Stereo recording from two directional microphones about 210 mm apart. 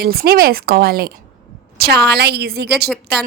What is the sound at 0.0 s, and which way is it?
Speech, 45° right (ahead or behind).